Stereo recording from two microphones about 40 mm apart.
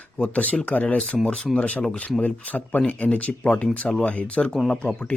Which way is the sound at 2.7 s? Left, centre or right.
Left.